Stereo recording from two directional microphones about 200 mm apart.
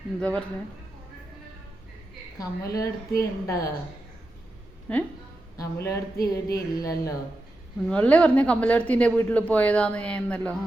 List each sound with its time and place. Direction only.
0.2 s speech: 5° left (ahead or behind)
2.4 s speech: 15° left (ahead or behind)
4.9 s speech: 5° left (ahead or behind)
7.9 s speech: 5° left (ahead or behind)